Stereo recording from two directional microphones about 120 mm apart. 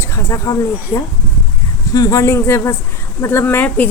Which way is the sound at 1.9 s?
30° left (ahead or behind).